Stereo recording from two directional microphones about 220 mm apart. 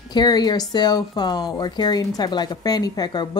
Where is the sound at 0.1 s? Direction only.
20° left (ahead or behind).